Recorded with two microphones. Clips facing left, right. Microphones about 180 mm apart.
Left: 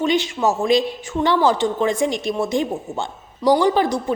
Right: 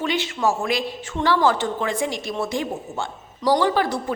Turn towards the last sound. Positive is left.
turn(degrees=20)  # may be behind; listen again after turning